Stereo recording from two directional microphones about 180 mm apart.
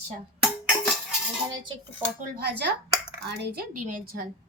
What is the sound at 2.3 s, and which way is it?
Speech, 60° right (ahead or behind).